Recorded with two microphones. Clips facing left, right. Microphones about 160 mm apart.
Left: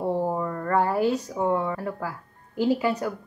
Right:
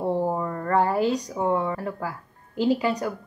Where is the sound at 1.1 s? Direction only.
15° right (ahead or behind).